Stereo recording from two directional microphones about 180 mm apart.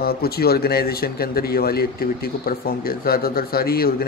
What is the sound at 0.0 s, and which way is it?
A man's voice, 60° left (ahead or behind).